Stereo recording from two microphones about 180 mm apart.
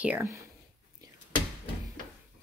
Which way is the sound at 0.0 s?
10° right (ahead or behind).